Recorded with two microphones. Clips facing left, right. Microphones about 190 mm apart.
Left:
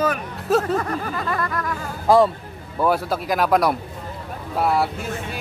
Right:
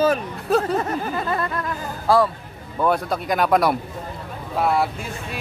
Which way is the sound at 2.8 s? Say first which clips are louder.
Even; 5° left (ahead or behind).